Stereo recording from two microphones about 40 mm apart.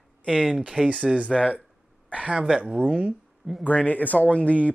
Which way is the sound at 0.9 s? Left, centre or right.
Right.